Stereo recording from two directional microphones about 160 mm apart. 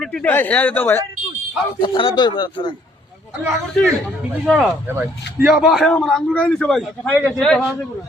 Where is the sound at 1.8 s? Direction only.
30° left (ahead or behind).